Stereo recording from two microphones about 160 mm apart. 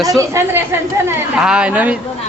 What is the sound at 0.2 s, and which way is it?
Speech, 15° right (ahead or behind).